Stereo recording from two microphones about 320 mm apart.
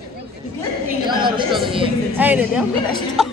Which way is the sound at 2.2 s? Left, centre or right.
Centre.